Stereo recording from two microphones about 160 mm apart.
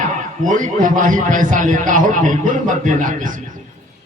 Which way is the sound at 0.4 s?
55° right (ahead or behind).